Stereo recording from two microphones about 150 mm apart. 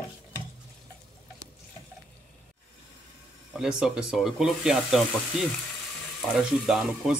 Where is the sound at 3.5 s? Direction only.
5° right (ahead or behind).